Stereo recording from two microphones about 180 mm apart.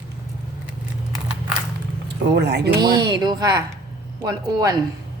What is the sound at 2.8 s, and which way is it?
A woman's voice, 25° right (ahead or behind).